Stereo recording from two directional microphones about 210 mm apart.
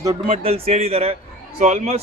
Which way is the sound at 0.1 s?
30° right (ahead or behind).